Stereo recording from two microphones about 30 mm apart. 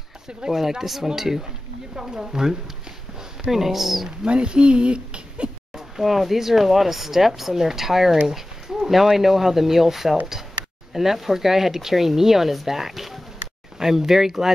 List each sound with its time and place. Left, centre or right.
0.5 s speech: centre
4.3 s speech: right
5.8 s speech: centre
8.3 s dog: centre
8.9 s speech: centre